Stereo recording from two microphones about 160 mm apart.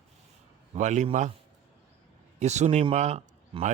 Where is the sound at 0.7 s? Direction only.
50° right (ahead or behind).